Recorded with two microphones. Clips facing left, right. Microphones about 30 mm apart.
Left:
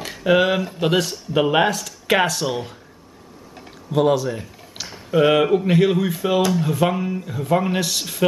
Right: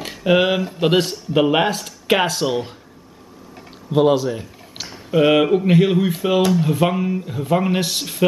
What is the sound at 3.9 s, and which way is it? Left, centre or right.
Speech, right.